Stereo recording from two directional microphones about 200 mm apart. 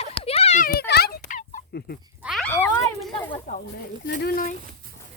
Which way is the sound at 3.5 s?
40° left (ahead or behind).